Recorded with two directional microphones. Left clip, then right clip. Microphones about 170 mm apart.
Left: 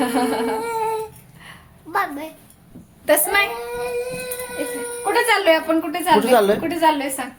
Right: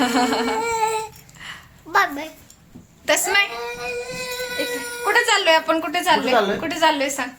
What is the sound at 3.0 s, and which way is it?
Speech, 20° left (ahead or behind).